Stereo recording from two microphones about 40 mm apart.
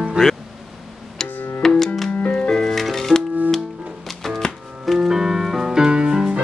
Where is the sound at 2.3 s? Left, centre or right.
Centre.